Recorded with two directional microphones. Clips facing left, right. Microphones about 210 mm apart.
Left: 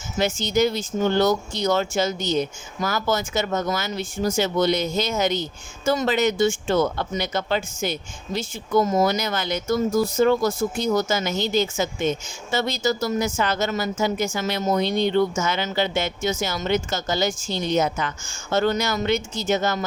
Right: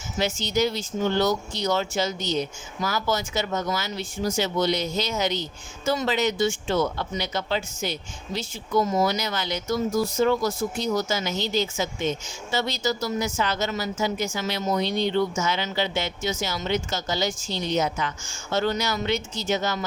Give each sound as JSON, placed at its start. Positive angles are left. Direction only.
{"t": 0.2, "sound": "speech", "side_deg": 50}